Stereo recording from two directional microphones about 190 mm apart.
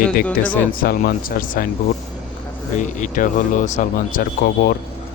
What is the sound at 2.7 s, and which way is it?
Speech, 40° left (ahead or behind).